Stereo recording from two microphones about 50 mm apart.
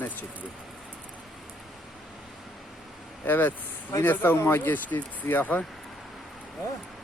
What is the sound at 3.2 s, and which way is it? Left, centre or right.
Speech, left.